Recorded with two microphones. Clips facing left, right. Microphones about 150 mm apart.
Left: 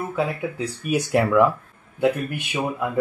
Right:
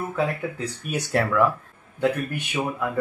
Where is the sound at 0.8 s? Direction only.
10° left (ahead or behind).